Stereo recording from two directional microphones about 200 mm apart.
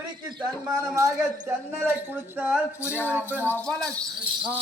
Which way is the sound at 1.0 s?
15° right (ahead or behind).